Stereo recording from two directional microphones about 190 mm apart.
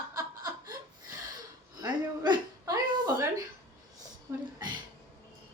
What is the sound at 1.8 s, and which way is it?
Hiccup, 20° right (ahead or behind).